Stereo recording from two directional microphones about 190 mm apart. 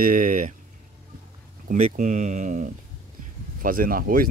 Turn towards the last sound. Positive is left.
turn(degrees=-50)  # may be behind; listen again after turning